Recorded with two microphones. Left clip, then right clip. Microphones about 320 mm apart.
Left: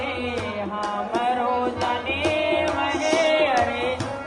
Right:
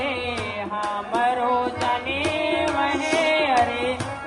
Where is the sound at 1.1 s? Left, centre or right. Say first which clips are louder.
Right 2 dB; centre.